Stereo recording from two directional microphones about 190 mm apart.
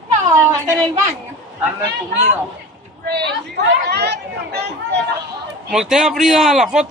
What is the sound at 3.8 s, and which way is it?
Chatter, 60° right (ahead or behind).